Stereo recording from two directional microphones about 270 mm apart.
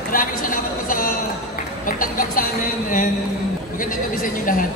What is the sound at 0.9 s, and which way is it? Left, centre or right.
Speech, left.